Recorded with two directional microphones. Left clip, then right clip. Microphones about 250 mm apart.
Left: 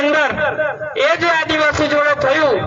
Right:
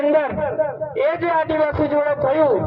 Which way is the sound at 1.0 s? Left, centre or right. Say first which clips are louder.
Left 4 dB; left.